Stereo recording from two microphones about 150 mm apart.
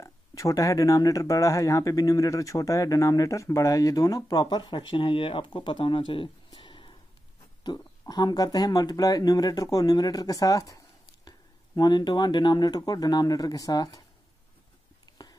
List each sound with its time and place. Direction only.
0.0 s speech: 20° left (ahead or behind)
8.1 s speech: 30° left (ahead or behind)
15.1 s a sound: 25° left (ahead or behind)